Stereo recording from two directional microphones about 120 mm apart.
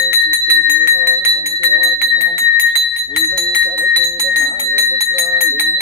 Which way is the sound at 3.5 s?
15° right (ahead or behind).